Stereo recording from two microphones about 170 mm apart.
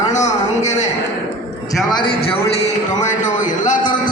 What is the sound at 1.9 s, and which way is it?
Speech, 30° left (ahead or behind).